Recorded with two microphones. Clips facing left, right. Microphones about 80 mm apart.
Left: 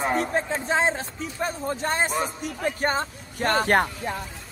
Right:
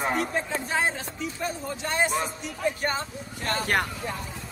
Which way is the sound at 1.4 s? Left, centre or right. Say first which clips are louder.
Left 6 dB; left.